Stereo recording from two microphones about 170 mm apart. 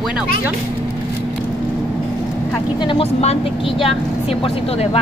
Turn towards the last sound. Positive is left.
turn(degrees=35)  # may be behind; listen again after turning